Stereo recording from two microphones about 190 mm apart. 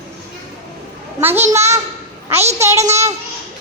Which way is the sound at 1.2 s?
10° right (ahead or behind).